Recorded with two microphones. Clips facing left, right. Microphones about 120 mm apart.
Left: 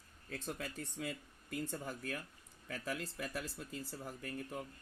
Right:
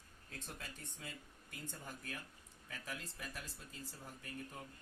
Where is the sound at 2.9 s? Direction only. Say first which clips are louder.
Left 7 dB; 70° left (ahead or behind).